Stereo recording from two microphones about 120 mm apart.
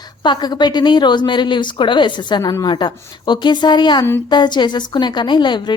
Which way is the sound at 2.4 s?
30° left (ahead or behind).